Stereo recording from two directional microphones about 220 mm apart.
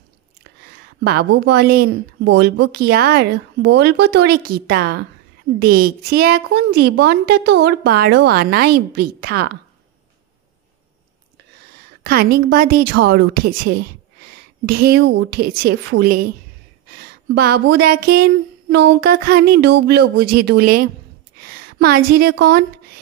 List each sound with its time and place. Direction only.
1.0 s a woman's voice: 50° right (ahead or behind)
12.0 s a woman's voice: 45° right (ahead or behind)
17.3 s a woman's voice: 50° right (ahead or behind)